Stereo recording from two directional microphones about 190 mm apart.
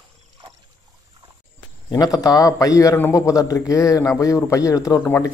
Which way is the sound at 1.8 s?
20° left (ahead or behind).